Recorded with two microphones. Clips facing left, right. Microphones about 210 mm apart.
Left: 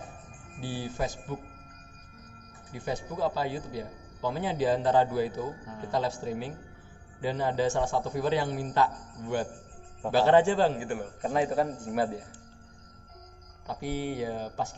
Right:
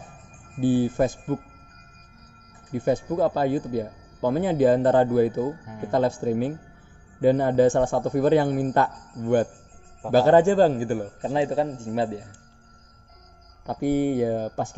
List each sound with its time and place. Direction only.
0.6 s speech: 55° right (ahead or behind)
2.7 s a man's voice: 50° right (ahead or behind); by 12.2 s 25° right (ahead or behind)
13.7 s speech: 50° right (ahead or behind)